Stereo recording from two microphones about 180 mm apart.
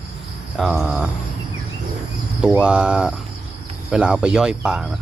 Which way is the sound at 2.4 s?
5° right (ahead or behind).